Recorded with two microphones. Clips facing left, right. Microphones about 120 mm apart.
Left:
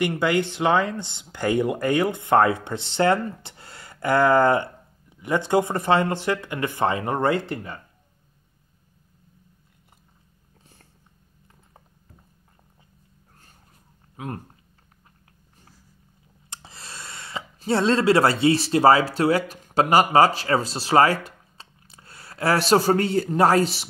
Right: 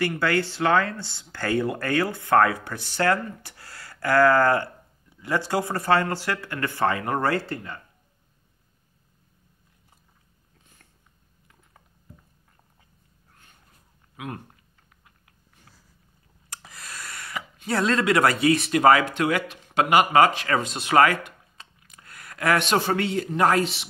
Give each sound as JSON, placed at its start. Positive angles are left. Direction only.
{"t": 0.0, "sound": "speech", "side_deg": 20}
{"t": 10.6, "sound": "cat", "side_deg": 35}
{"t": 14.1, "sound": "speech", "side_deg": 35}
{"t": 16.4, "sound": "speech", "side_deg": 30}